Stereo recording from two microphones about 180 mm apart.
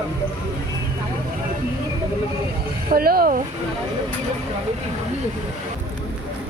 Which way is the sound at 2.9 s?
55° right (ahead or behind).